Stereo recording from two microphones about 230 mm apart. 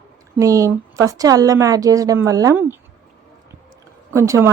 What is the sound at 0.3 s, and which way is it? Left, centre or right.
A woman's voice, centre.